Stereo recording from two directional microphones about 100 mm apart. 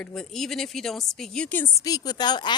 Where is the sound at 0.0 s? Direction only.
5° left (ahead or behind).